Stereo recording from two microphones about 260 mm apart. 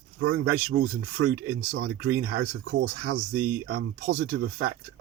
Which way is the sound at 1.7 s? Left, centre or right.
Right.